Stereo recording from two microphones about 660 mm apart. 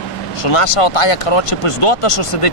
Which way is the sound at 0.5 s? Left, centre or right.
Left.